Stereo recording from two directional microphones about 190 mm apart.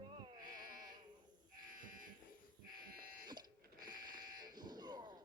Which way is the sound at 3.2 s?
20° right (ahead or behind).